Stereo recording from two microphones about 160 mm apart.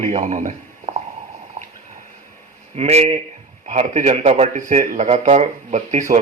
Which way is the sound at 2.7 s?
40° right (ahead or behind).